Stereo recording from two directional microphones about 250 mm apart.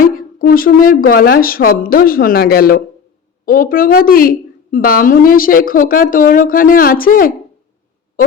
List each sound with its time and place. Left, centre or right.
0.0 s a woman's voice: left